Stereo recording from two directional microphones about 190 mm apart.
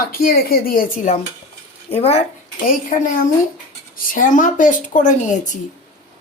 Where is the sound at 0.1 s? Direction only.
50° left (ahead or behind); by 2.2 s 35° left (ahead or behind).